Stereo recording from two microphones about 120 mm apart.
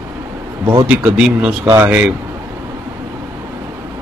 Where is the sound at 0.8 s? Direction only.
10° right (ahead or behind).